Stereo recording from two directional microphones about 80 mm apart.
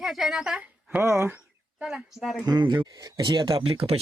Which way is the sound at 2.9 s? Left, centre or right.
Right.